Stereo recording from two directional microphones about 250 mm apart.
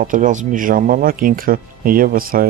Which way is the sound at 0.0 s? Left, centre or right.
Right.